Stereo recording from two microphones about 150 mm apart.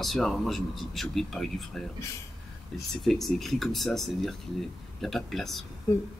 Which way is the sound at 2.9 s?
Centre (ahead or behind).